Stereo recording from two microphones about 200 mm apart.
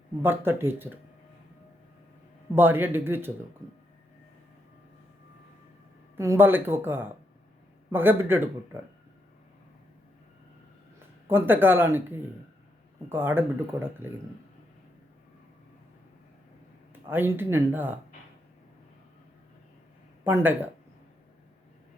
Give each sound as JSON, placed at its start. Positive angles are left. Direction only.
{"t": 0.2, "sound": "speech", "side_deg": -10}
{"t": 2.6, "sound": "speech", "side_deg": -10}
{"t": 6.1, "sound": "speech", "side_deg": -10}
{"t": 11.3, "sound": "speech", "side_deg": -10}
{"t": 13.1, "sound": "speech", "side_deg": -10}
{"t": 16.9, "sound": "speech", "side_deg": -10}
{"t": 20.2, "sound": "speech", "side_deg": -10}